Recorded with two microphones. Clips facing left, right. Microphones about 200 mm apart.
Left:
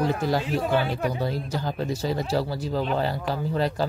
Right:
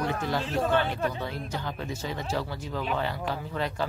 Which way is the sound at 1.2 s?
35° left (ahead or behind).